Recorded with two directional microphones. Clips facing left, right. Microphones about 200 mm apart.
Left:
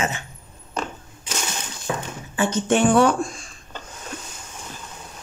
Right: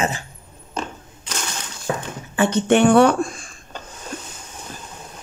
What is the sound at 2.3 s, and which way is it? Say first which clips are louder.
Speech: right 4 dB; 60° right (ahead or behind).